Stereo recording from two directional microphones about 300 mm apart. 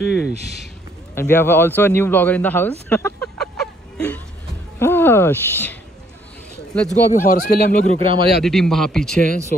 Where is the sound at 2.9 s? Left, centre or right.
Centre.